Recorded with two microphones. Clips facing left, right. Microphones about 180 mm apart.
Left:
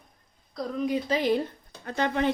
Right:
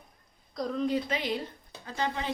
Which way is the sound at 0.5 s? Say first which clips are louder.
Left 1 dB; 5° left (ahead or behind).